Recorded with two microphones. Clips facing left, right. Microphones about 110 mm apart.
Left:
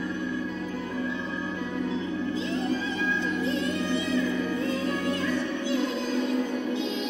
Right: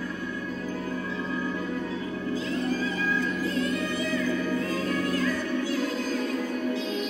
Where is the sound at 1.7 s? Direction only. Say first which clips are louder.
Left 2 dB; 25° left (ahead or behind).